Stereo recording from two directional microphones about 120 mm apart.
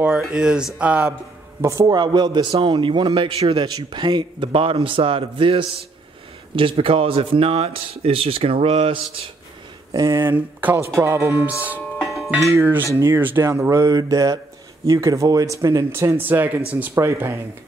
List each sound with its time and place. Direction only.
0.2 s speech: 5° right (ahead or behind)
1.6 s a man's voice: 25° right (ahead or behind); by 8.9 s 60° right (ahead or behind)
8.9 s a man's voice: 50° right (ahead or behind)
9.9 s speech: 25° right (ahead or behind)
12.0 s music: centre (ahead or behind)
12.3 s speech: 20° right (ahead or behind)